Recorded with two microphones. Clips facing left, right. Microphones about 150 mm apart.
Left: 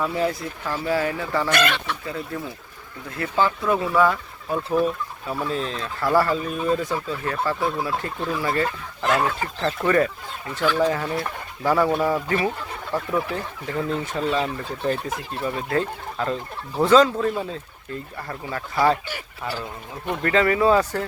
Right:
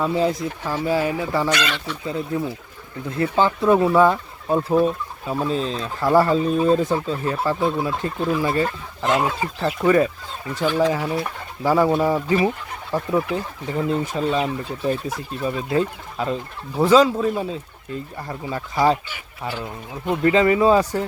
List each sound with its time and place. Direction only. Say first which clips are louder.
0.0 s speech: right 3 dB; 20° right (ahead or behind)
1.5 s speech: left 1 dB; 55° left (ahead or behind)
2.0 s speech: right 5 dB; 25° right (ahead or behind)
19.0 s speech: even; 40° left (ahead or behind)
20.2 s speech: right 3 dB; 20° right (ahead or behind)